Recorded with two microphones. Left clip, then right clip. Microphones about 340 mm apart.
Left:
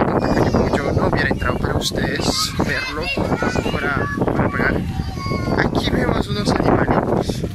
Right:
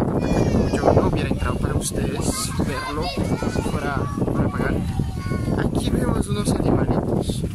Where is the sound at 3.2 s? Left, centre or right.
Left.